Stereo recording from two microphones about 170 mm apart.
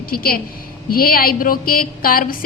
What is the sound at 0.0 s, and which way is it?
A woman's voice, 60° left (ahead or behind).